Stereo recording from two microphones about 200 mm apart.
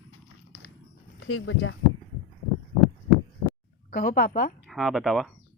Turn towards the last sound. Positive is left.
turn(degrees=0)  # may be behind; listen again after turning